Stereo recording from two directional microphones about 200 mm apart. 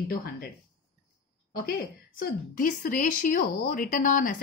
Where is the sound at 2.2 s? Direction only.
45° left (ahead or behind).